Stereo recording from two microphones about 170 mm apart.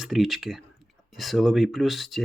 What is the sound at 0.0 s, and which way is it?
Speech, centre (ahead or behind).